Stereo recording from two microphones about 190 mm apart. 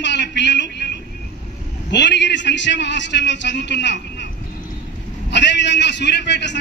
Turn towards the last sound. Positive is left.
turn(degrees=65)  # may be behind; listen again after turning